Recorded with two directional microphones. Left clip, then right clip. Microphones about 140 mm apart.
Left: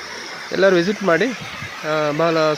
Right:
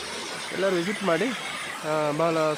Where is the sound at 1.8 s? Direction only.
25° left (ahead or behind).